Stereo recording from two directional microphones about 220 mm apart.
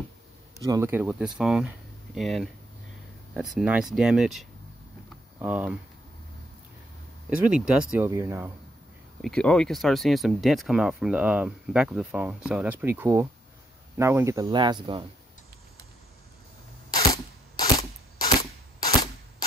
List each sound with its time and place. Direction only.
0.6 s speech: 15° right (ahead or behind)
7.2 s speech: 5° right (ahead or behind)
9.2 s speech: 5° left (ahead or behind); by 15.0 s 20° right (ahead or behind)
17.7 s gunshot: 20° left (ahead or behind)